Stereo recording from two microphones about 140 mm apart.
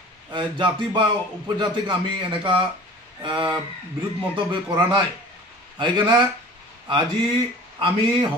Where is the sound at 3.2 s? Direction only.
35° right (ahead or behind).